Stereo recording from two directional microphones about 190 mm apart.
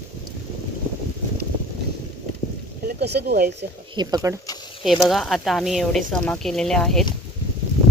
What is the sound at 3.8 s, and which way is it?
Speech, 20° right (ahead or behind).